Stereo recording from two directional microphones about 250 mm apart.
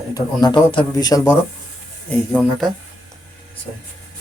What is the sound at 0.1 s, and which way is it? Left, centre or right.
A man's voice, centre.